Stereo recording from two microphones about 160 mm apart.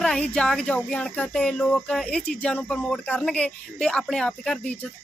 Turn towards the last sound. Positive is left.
turn(degrees=5)  # may be behind; listen again after turning